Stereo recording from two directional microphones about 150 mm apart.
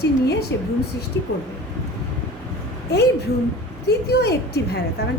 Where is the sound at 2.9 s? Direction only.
90° left.